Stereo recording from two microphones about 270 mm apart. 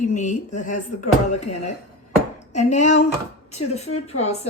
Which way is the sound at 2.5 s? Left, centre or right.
Left.